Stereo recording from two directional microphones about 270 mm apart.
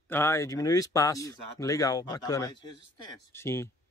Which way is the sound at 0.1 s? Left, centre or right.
Centre.